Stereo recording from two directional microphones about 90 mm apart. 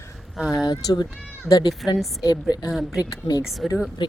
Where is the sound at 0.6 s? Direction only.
50° left (ahead or behind).